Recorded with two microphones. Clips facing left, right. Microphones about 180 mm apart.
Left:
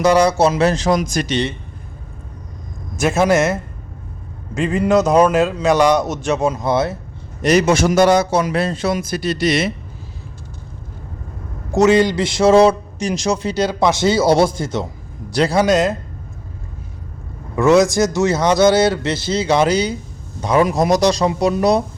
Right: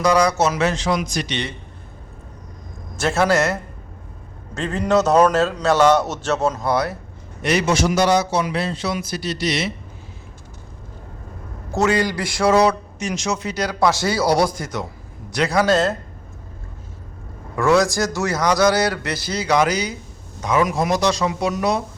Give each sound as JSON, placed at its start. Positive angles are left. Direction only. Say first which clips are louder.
{"t": 0.0, "sound": "a man's voice", "louder": "left 4 dB", "side_deg": 30}
{"t": 3.0, "sound": "a man's voice", "louder": "left 3 dB", "side_deg": 15}
{"t": 7.4, "sound": "a man's voice", "louder": "left 5 dB", "side_deg": 45}
{"t": 11.7, "sound": "a man's voice", "louder": "left 6 dB", "side_deg": 20}
{"t": 15.6, "sound": "a man's voice", "louder": "left 2 dB", "side_deg": 15}
{"t": 17.5, "sound": "a man's voice", "louder": "left 4 dB", "side_deg": 20}